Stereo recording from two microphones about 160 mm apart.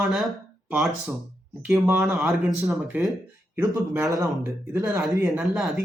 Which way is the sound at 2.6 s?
15° right (ahead or behind).